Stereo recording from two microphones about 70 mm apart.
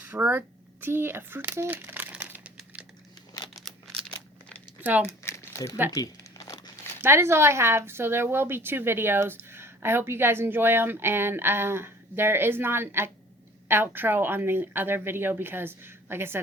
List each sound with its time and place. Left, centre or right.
0.0 s a sound: right
4.8 s speech: right
5.0 s crumpling: left
5.9 s crumpling: left
7.0 s a woman's voice: right